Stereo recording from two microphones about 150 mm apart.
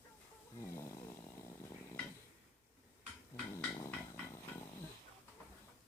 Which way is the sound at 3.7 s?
20° left (ahead or behind).